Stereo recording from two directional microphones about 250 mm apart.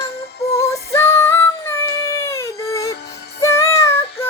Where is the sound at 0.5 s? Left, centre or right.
Centre.